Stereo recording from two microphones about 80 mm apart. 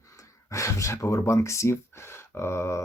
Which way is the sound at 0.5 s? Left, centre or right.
Left.